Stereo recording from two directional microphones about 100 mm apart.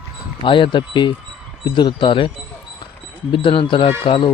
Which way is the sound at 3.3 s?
60° left (ahead or behind).